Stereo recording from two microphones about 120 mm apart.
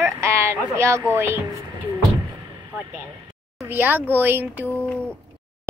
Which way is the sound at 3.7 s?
15° right (ahead or behind).